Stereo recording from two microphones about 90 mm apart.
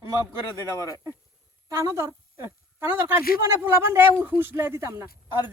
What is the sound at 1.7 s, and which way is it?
A woman's voice, 35° right (ahead or behind).